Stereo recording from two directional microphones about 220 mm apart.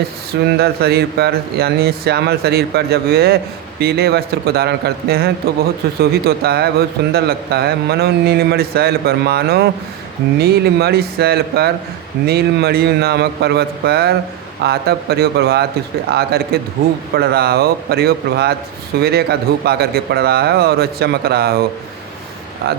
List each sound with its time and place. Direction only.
0.6 s a man's voice: 45° right (ahead or behind)
22.6 s a man's voice: 45° right (ahead or behind)